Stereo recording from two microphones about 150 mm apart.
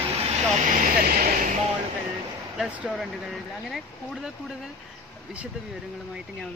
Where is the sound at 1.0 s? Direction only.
75° right (ahead or behind).